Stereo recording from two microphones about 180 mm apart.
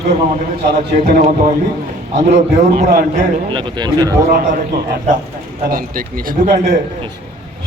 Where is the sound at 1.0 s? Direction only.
45° right (ahead or behind).